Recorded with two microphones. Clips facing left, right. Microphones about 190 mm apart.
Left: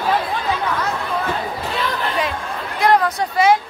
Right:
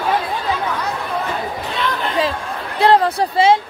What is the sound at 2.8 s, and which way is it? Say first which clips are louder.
Speech: right 3 dB; 30° right (ahead or behind).